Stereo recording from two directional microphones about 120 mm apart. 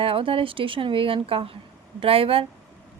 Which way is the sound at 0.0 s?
50° right (ahead or behind).